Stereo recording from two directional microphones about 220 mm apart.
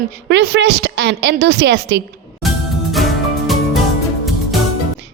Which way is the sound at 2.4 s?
Centre (ahead or behind).